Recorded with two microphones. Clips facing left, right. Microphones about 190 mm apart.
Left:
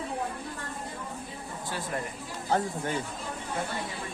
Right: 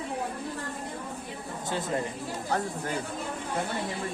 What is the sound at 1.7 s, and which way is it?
Speech, 20° right (ahead or behind).